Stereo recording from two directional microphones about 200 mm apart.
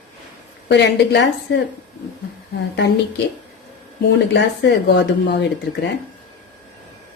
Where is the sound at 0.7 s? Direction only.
60° left (ahead or behind).